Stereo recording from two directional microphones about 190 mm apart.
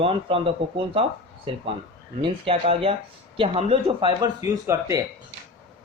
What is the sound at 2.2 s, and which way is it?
A man's voice, 30° right (ahead or behind).